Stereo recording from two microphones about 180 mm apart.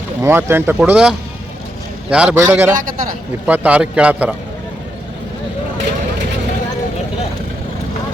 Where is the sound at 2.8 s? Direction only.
50° right (ahead or behind).